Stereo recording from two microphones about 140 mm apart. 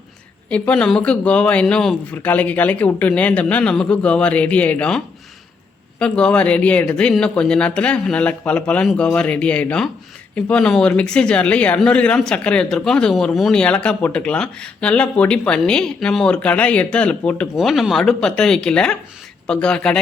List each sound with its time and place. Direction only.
0.5 s speech: 10° left (ahead or behind)